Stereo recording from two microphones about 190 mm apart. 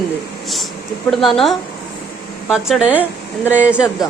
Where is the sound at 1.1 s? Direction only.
Centre (ahead or behind).